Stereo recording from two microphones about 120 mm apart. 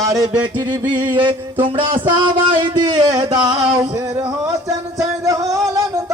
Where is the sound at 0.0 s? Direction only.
30° right (ahead or behind).